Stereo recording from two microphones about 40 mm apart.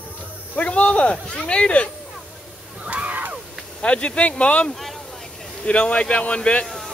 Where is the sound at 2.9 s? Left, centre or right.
Right.